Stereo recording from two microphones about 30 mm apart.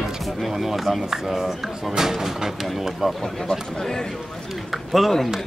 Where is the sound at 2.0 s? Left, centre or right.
Centre.